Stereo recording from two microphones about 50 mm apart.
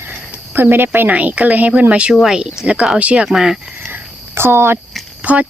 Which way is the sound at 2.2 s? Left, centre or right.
Centre.